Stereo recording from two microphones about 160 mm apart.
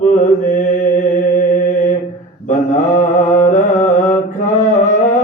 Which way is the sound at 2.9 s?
50° left (ahead or behind).